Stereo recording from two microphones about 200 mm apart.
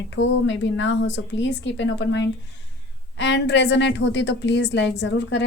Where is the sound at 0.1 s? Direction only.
65° left (ahead or behind).